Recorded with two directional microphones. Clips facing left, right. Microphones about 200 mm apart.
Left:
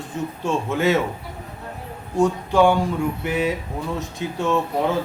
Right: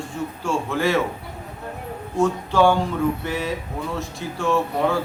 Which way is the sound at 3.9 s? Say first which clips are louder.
Left 2 dB; 20° left (ahead or behind).